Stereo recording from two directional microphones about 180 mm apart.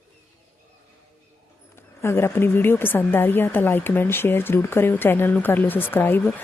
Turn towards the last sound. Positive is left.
turn(degrees=10)  # may be behind; listen again after turning